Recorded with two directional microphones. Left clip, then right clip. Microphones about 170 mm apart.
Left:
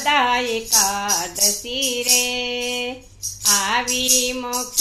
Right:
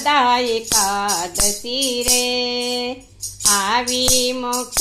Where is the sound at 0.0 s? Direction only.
35° right (ahead or behind).